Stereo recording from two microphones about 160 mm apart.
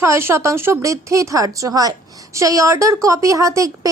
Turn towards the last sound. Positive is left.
turn(degrees=-20)  # may be behind; listen again after turning